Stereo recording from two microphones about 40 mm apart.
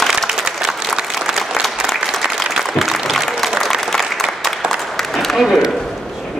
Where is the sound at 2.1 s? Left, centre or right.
Centre.